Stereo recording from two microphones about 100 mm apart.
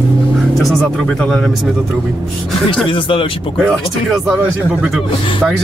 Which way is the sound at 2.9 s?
60° left (ahead or behind).